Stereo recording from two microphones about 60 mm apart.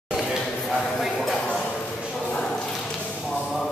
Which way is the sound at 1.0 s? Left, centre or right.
Centre.